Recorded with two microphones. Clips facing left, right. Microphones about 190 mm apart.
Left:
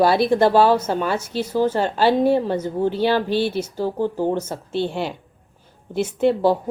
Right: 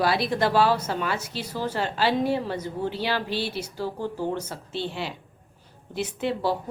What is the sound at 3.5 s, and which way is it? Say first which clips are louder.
Speech: left 8 dB; 20° left (ahead or behind).